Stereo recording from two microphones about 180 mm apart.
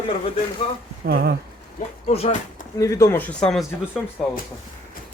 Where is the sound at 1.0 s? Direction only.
60° right (ahead or behind).